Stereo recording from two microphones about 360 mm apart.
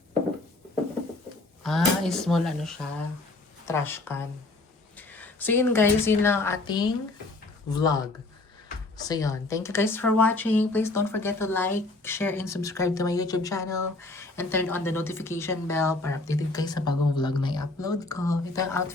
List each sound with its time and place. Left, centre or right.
1.6 s a woman's voice: centre